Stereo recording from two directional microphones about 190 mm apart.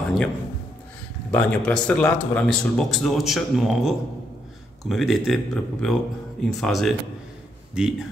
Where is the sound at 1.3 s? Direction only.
5° left (ahead or behind).